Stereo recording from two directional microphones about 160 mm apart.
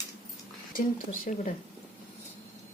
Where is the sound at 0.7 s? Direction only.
60° left (ahead or behind).